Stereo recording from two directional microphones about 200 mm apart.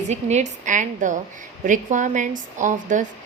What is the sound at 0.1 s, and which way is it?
A woman's voice, 35° right (ahead or behind).